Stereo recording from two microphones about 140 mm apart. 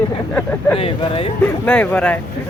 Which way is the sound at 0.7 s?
40° left (ahead or behind).